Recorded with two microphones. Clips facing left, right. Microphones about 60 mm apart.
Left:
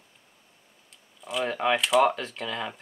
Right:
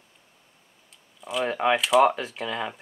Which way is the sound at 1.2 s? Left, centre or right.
Centre.